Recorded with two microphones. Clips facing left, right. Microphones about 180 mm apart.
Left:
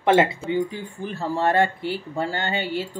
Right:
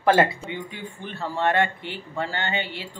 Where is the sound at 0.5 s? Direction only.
40° left (ahead or behind).